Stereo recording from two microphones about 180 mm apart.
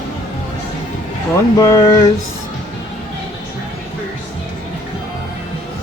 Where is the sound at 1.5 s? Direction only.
15° left (ahead or behind).